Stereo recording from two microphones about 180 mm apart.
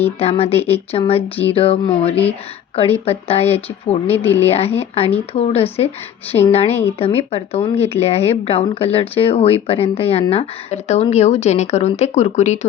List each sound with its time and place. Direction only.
0.2 s speech: 35° left (ahead or behind)
4.1 s speech: 10° left (ahead or behind)
4.4 s speech: 35° left (ahead or behind)